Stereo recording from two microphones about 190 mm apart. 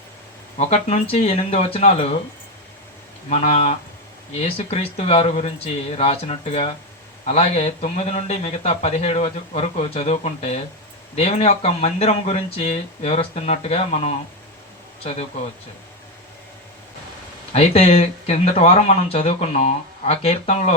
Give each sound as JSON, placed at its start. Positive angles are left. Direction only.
{"t": 0.5, "sound": "speech", "side_deg": 35}
{"t": 3.2, "sound": "speech", "side_deg": 35}
{"t": 17.5, "sound": "speech", "side_deg": 30}